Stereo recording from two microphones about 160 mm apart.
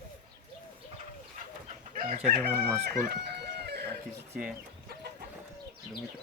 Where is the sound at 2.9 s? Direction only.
75° right (ahead or behind).